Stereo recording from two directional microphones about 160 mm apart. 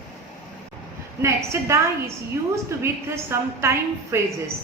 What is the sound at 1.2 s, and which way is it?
Speech, 20° right (ahead or behind).